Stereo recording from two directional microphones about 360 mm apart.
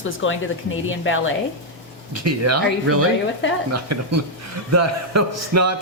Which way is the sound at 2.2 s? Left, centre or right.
Right.